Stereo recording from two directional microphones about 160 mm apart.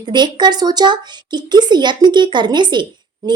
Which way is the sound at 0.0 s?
30° right (ahead or behind).